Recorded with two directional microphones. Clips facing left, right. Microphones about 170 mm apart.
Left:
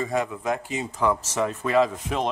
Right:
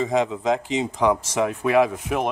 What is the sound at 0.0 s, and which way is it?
Speech, 20° right (ahead or behind).